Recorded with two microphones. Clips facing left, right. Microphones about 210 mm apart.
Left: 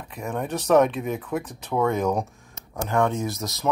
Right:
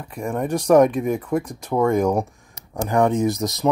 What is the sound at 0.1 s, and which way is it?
Speech, 10° right (ahead or behind).